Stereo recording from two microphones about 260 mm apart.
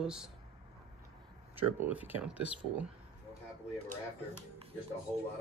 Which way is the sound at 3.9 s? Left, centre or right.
Right.